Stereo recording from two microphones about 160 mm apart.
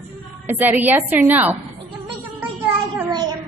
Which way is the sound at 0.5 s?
10° right (ahead or behind).